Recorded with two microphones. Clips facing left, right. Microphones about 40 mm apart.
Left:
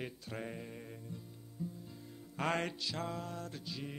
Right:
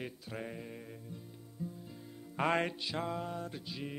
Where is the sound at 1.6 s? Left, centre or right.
Right.